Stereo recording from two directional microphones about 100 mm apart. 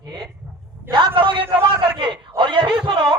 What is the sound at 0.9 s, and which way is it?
A man's voice, 55° right (ahead or behind).